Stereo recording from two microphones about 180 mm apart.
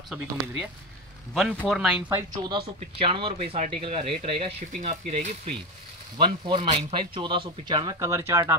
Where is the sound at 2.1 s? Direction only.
20° right (ahead or behind).